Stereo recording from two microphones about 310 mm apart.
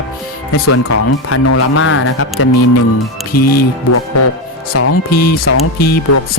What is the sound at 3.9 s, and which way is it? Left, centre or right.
Speech, left.